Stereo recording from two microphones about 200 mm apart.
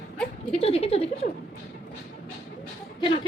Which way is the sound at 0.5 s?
30° left (ahead or behind).